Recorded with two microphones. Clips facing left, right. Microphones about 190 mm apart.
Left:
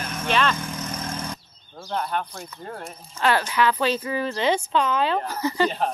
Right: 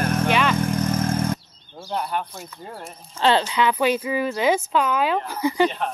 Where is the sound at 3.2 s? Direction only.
25° right (ahead or behind).